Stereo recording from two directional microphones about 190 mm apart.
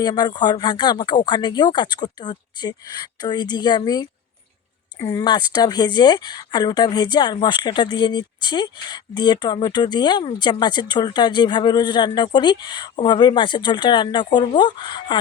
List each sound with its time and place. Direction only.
0.0 s speech: 20° left (ahead or behind)